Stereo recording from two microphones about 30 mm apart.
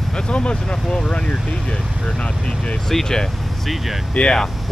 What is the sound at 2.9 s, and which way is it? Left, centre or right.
Speech, centre.